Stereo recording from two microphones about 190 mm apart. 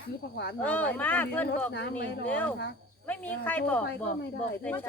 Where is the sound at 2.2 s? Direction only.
5° left (ahead or behind).